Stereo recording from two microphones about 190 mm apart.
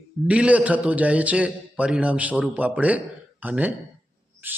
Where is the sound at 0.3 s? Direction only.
5° right (ahead or behind).